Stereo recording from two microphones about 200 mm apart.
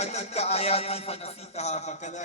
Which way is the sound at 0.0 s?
35° left (ahead or behind).